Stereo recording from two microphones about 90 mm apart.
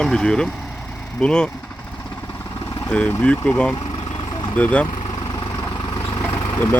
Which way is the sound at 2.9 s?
10° left (ahead or behind).